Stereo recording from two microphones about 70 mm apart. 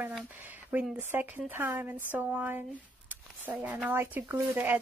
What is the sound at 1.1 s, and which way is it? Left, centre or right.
Speech, right.